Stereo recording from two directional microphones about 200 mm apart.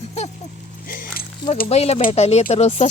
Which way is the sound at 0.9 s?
45° left (ahead or behind).